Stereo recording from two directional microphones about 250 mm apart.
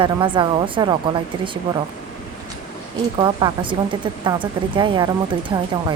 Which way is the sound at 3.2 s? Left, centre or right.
Centre.